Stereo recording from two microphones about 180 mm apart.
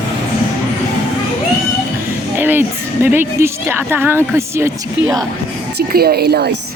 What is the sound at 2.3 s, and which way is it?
Music, 10° right (ahead or behind).